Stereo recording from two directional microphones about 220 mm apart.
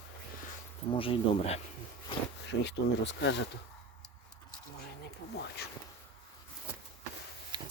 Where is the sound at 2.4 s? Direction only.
55° left (ahead or behind).